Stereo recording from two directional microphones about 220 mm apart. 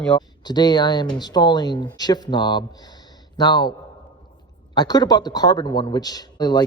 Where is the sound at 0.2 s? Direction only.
20° left (ahead or behind).